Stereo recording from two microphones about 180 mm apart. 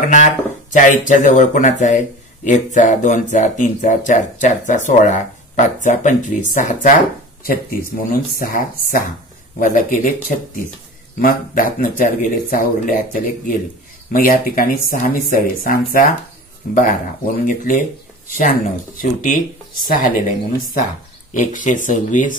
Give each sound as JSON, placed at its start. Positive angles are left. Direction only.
{"t": 0.7, "sound": "speech", "side_deg": 45}
{"t": 17.5, "sound": "speech", "side_deg": 45}